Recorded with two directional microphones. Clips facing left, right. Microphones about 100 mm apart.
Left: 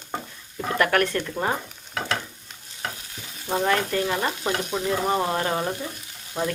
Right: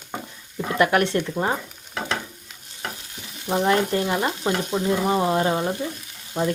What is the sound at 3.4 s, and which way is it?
Speech, 20° right (ahead or behind).